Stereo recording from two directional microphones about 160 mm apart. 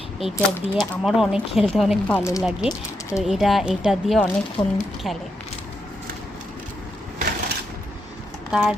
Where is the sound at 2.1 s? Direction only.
20° left (ahead or behind).